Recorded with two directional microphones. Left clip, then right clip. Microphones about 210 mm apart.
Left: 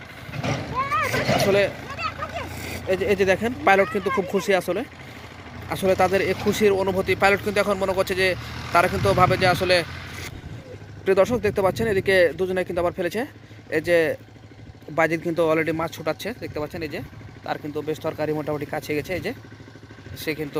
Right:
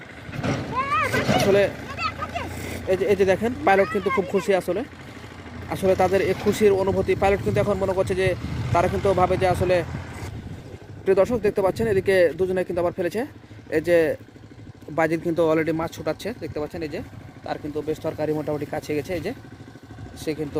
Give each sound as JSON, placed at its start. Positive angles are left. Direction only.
{"t": 0.3, "sound": "vehicle", "side_deg": -55}
{"t": 1.2, "sound": "a sound", "side_deg": -55}
{"t": 1.5, "sound": "speech", "side_deg": -15}
{"t": 8.4, "sound": "vehicle", "side_deg": -55}
{"t": 9.0, "sound": "speech", "side_deg": -5}
{"t": 11.0, "sound": "speech", "side_deg": -5}